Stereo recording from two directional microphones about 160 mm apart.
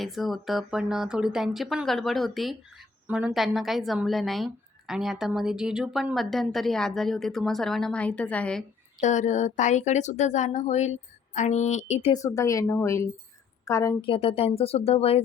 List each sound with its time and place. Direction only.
0.0 s speech: centre (ahead or behind)
9.0 s speech: 50° left (ahead or behind)
12.1 s a woman's voice: 20° left (ahead or behind)
14.0 s speech: 35° left (ahead or behind)